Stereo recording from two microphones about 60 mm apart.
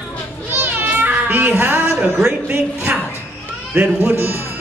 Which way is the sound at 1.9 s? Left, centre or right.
Centre.